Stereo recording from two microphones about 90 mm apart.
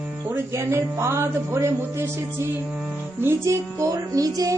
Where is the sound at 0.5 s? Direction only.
30° right (ahead or behind).